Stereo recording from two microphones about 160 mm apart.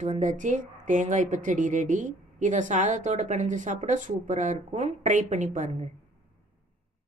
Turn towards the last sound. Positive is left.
turn(degrees=-50)  # may be behind; listen again after turning